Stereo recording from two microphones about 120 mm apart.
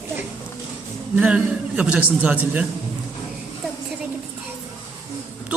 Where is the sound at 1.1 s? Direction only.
10° right (ahead or behind).